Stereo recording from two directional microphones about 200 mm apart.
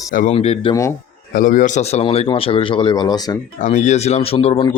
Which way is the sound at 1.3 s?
45° left (ahead or behind).